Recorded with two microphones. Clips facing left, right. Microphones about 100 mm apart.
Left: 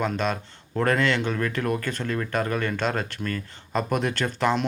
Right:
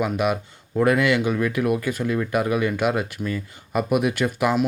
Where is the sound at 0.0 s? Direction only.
10° right (ahead or behind).